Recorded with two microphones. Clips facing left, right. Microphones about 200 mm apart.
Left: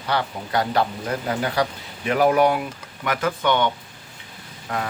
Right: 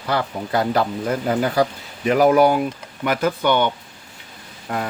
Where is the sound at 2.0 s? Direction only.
40° right (ahead or behind).